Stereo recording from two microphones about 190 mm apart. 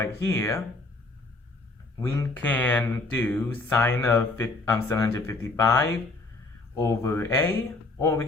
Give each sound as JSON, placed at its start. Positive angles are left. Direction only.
{"t": 0.0, "sound": "speech", "side_deg": 15}
{"t": 2.1, "sound": "speech", "side_deg": 10}